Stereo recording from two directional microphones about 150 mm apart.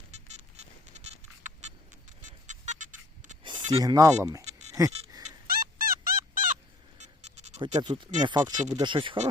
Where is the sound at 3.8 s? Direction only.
25° right (ahead or behind).